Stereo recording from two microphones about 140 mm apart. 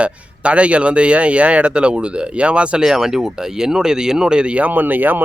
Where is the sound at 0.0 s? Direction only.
10° right (ahead or behind).